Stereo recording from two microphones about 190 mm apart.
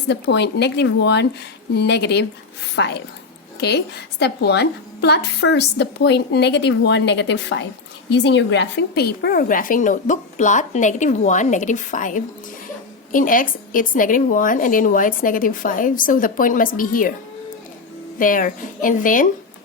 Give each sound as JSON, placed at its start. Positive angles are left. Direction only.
{"t": 0.1, "sound": "a woman's voice", "side_deg": 65}
{"t": 18.2, "sound": "speech", "side_deg": 45}